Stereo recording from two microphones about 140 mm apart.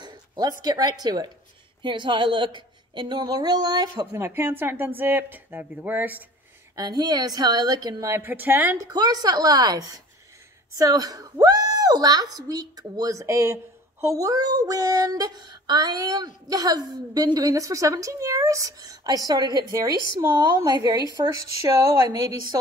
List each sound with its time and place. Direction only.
0.0 s a woman's voice: 30° right (ahead or behind)
4.2 s speech: 15° right (ahead or behind)
6.7 s a woman's voice: 30° right (ahead or behind)
8.7 s a woman's voice: 30° right (ahead or behind)